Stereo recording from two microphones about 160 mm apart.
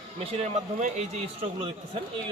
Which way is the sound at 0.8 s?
45° right (ahead or behind).